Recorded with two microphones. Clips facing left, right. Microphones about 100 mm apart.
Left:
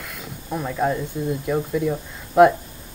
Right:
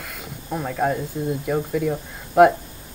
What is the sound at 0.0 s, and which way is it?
Snake, 55° right (ahead or behind).